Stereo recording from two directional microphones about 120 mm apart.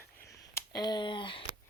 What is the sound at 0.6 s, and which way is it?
Speech, 35° left (ahead or behind).